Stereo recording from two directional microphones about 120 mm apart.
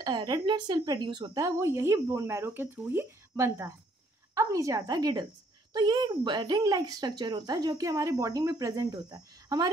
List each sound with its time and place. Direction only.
0.0 s speech: 35° right (ahead or behind)